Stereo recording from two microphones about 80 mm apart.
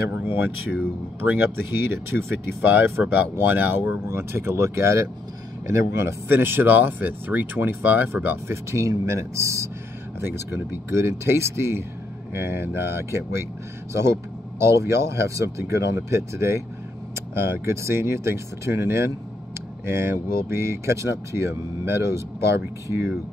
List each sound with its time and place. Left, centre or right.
0.1 s speech: right
8.7 s speech: right
14.6 s speech: right